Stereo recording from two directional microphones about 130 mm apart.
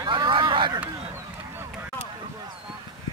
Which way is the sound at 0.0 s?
40° right (ahead or behind).